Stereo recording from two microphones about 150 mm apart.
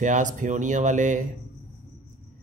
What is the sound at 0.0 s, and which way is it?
A man's voice, 55° right (ahead or behind).